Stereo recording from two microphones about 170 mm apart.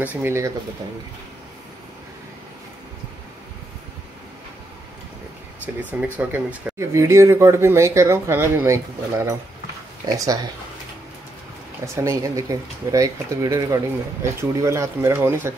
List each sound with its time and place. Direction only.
0.0 s speech: 10° right (ahead or behind)
5.8 s speech: 10° right (ahead or behind)
11.9 s speech: 20° right (ahead or behind)